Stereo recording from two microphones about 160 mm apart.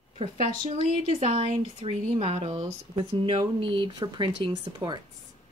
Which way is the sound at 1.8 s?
40° right (ahead or behind).